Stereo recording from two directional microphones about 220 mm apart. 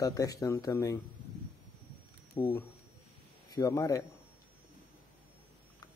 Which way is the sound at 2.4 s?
20° left (ahead or behind).